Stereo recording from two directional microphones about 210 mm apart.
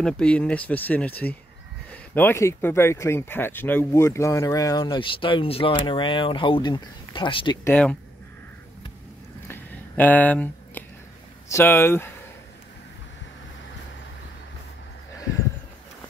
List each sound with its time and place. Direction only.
0.0 s speech: 5° left (ahead or behind); by 7.5 s 25° left (ahead or behind)
7.6 s speech: 5° left (ahead or behind)
9.5 s a sound: 10° left (ahead or behind)
11.4 s speech: 10° left (ahead or behind)